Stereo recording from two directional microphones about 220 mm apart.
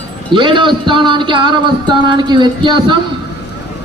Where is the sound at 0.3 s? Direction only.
20° right (ahead or behind).